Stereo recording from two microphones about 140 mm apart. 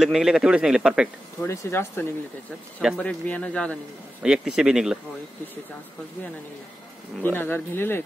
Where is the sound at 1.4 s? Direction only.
20° left (ahead or behind).